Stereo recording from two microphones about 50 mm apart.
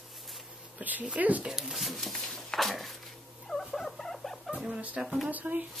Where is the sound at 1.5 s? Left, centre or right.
Centre.